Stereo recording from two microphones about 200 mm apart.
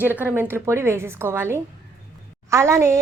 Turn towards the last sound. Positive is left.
turn(degrees=-15)  # may be behind; listen again after turning